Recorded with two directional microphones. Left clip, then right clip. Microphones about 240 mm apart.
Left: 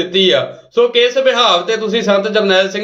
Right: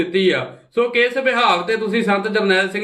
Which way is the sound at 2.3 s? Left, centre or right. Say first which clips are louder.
Left 4 dB; centre.